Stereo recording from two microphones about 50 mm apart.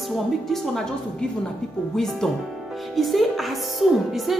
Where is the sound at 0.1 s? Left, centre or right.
Centre.